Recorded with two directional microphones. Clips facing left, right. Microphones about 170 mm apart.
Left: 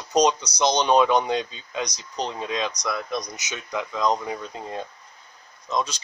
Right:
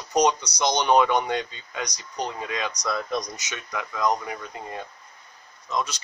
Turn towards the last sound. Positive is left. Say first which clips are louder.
# left 2 dB
turn(degrees=30)  # may be behind; listen again after turning